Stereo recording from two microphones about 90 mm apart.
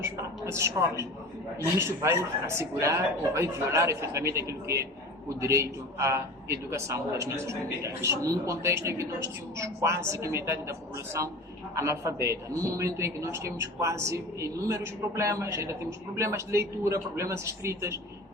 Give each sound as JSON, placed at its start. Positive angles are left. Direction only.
{"t": 0.5, "sound": "a man's voice", "side_deg": -30}